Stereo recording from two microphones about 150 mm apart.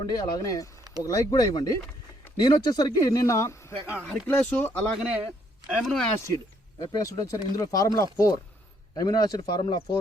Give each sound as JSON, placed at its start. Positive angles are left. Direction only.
{"t": 0.0, "sound": "speech", "side_deg": 25}
{"t": 3.9, "sound": "speech", "side_deg": -5}
{"t": 4.3, "sound": "speech", "side_deg": 10}
{"t": 4.9, "sound": "a man's voice", "side_deg": -5}
{"t": 6.2, "sound": "speech", "side_deg": 25}